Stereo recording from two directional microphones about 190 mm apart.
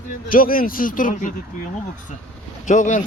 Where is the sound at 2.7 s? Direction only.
40° left (ahead or behind).